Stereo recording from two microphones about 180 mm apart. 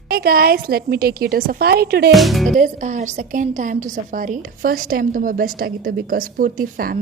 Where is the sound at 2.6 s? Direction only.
45° right (ahead or behind).